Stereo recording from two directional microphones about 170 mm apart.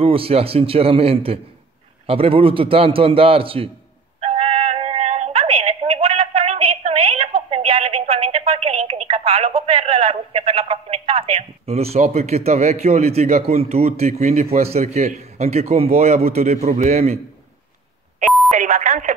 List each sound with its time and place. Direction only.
0.0 s a man's voice: 35° right (ahead or behind)
4.2 s music: 35° right (ahead or behind)
7.4 s telephone: 35° right (ahead or behind)
14.6 s a man's voice: 40° right (ahead or behind)
18.5 s a sound: 45° right (ahead or behind)